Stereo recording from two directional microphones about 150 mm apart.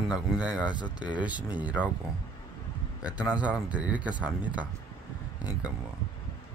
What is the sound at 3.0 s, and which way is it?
Speech, 10° right (ahead or behind).